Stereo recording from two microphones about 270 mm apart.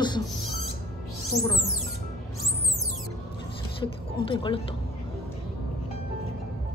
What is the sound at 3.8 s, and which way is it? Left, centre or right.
Speech, centre.